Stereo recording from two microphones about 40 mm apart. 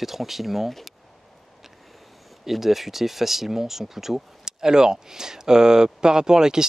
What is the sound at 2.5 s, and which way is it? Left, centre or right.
Speech, centre.